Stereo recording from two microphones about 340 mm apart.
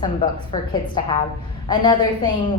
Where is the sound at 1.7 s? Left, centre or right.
Centre.